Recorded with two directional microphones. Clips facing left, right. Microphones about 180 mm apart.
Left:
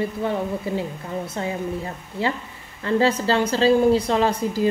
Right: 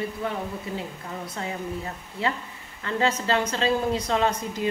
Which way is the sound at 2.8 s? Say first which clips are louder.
Left 6 dB; 35° left (ahead or behind).